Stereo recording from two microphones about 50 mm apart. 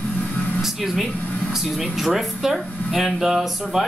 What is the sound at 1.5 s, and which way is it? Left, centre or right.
Speech, centre.